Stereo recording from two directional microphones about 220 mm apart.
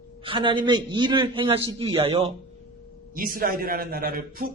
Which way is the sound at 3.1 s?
40° right (ahead or behind).